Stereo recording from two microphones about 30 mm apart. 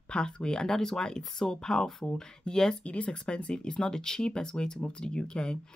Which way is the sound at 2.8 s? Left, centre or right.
Left.